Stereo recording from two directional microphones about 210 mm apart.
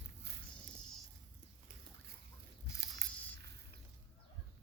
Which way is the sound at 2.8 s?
55° right (ahead or behind).